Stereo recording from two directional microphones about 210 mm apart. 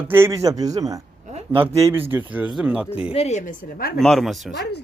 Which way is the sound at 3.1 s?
30° left (ahead or behind).